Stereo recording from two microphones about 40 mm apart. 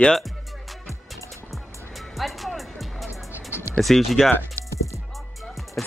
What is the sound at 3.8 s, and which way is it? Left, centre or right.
Speech, centre.